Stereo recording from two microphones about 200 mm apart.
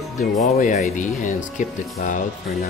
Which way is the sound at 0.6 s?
35° left (ahead or behind).